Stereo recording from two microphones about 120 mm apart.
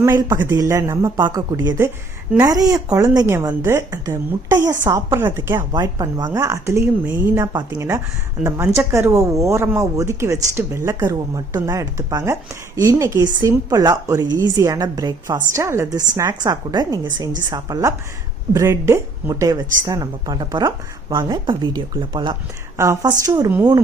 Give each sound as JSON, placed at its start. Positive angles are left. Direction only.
{"t": 0.0, "sound": "a woman's voice", "side_deg": -25}
{"t": 5.5, "sound": "a woman's voice", "side_deg": -35}
{"t": 22.8, "sound": "a woman's voice", "side_deg": -25}